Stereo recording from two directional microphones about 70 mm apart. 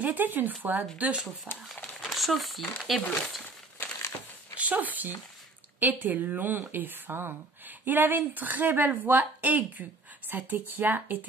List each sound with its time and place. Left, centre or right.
0.0 s speech: right
0.9 s speech: centre
2.0 s speech: centre
3.4 s crumpling: left
4.6 s speech: right